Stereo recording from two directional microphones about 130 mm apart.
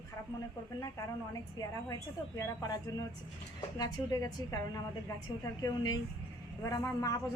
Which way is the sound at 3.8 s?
30° left (ahead or behind).